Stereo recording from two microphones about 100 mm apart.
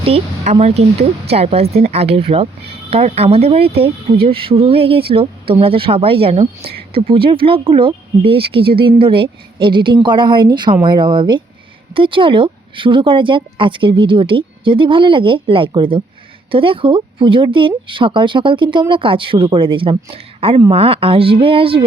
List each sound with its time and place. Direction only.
0.0 s speech: 75° right (ahead or behind)